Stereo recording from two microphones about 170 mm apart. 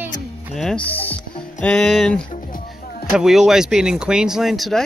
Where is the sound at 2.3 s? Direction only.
55° left (ahead or behind).